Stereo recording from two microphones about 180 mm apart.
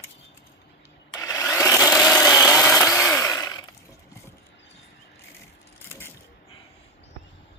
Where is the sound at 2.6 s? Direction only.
15° left (ahead or behind).